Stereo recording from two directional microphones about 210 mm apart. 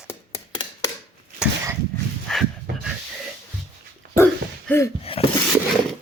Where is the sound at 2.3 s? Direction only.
5° left (ahead or behind).